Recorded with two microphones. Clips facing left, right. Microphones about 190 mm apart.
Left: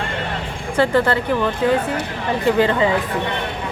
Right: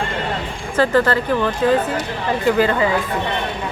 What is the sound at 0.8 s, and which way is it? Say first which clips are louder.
Speech: right 1 dB; 15° left (ahead or behind).